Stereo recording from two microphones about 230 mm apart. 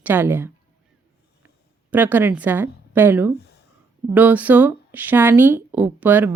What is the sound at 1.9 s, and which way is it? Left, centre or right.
Speech, centre.